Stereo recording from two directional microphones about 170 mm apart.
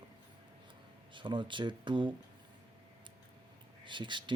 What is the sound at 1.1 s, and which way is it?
Speech, 30° right (ahead or behind).